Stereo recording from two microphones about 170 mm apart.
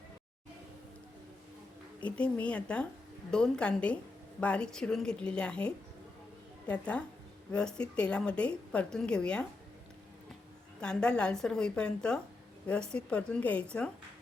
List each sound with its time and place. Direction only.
2.0 s a woman's voice: 5° left (ahead or behind)
10.8 s a woman's voice: 5° left (ahead or behind)